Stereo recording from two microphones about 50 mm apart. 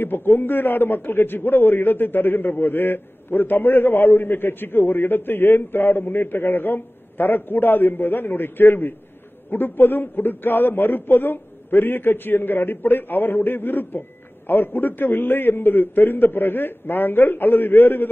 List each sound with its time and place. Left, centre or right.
0.0 s a man's voice: left